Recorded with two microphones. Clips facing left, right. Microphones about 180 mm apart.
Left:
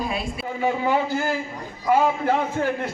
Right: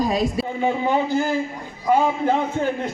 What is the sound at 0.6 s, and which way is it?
Speech, 20° right (ahead or behind).